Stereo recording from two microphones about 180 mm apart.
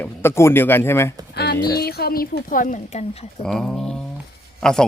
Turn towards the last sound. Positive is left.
turn(degrees=5)  # may be behind; listen again after turning